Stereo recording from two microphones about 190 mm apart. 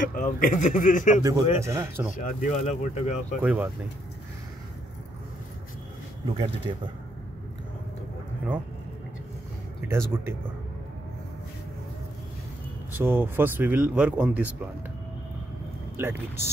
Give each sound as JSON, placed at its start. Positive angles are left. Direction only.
{"t": 0.0, "sound": "a man's voice", "side_deg": 45}
{"t": 1.2, "sound": "speech", "side_deg": -15}
{"t": 2.1, "sound": "speech", "side_deg": 40}
{"t": 3.4, "sound": "speech", "side_deg": -10}
{"t": 6.2, "sound": "speech", "side_deg": -25}
{"t": 9.8, "sound": "speech", "side_deg": -15}
{"t": 12.9, "sound": "speech", "side_deg": -10}
{"t": 16.0, "sound": "speech", "side_deg": -15}